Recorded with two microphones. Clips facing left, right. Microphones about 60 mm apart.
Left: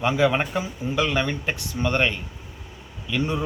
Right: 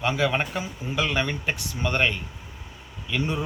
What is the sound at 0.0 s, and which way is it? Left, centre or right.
Speech, centre.